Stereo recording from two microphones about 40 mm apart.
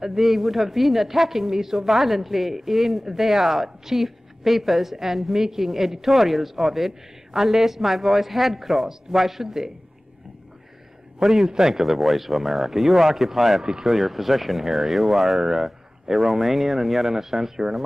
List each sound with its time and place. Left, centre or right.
0.0 s a man's voice: centre
11.1 s a man's voice: centre
13.9 s speech: centre